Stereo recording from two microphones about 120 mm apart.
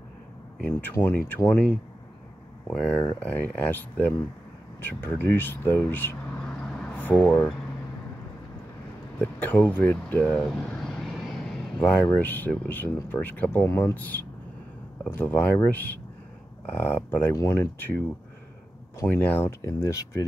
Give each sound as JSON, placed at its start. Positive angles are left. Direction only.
{"t": 0.6, "sound": "speech", "side_deg": 15}
{"t": 9.2, "sound": "speech", "side_deg": 15}
{"t": 17.3, "sound": "speech", "side_deg": 25}
{"t": 19.6, "sound": "speech", "side_deg": 25}